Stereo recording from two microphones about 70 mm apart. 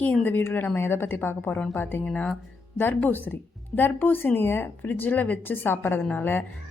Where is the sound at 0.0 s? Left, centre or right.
Left.